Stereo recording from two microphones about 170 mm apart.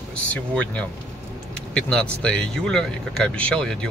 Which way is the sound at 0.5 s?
10° left (ahead or behind).